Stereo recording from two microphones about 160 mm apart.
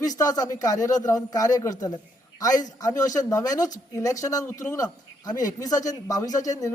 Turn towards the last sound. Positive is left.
turn(degrees=20)  # may be behind; listen again after turning